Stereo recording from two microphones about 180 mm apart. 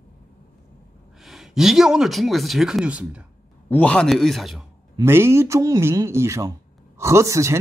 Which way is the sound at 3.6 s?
10° left (ahead or behind).